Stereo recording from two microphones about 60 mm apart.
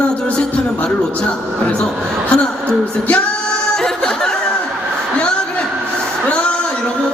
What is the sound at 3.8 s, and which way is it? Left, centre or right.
Music, centre.